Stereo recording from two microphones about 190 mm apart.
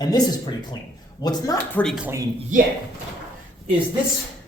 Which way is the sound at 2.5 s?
40° right (ahead or behind).